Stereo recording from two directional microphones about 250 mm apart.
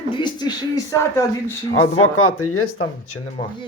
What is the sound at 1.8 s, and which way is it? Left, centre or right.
Speech, left.